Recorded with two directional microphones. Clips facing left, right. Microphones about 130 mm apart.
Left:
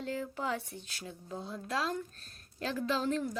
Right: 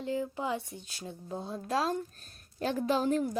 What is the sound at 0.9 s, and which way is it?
A woman's voice, 30° right (ahead or behind).